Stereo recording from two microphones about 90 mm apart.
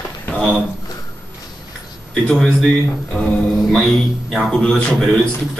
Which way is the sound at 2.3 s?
10° left (ahead or behind).